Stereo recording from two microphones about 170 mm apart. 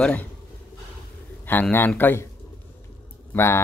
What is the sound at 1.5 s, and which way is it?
Speech, 10° left (ahead or behind).